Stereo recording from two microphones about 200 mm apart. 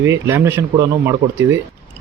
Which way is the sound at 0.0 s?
10° right (ahead or behind).